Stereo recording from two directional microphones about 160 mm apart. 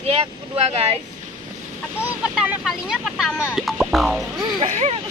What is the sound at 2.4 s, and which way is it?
Speech, 5° right (ahead or behind).